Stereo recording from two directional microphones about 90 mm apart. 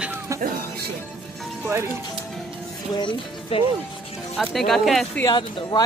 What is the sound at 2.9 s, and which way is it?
Speech, 60° left (ahead or behind).